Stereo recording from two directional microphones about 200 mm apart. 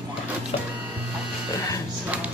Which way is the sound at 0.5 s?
30° left (ahead or behind).